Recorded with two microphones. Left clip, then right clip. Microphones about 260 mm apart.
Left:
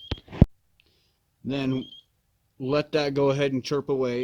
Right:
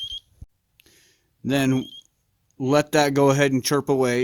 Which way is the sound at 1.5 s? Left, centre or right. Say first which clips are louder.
Right 6 dB; right.